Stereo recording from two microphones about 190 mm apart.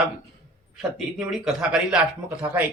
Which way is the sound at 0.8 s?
Centre (ahead or behind).